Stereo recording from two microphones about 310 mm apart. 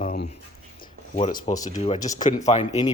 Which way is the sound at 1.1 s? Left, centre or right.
Centre.